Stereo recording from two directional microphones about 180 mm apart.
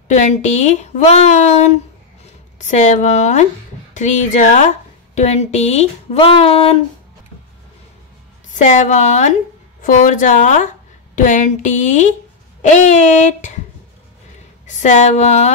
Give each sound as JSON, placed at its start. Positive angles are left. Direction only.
{"t": 0.1, "sound": "speech", "side_deg": 40}
{"t": 8.6, "sound": "speech", "side_deg": 40}
{"t": 14.7, "sound": "speech", "side_deg": 40}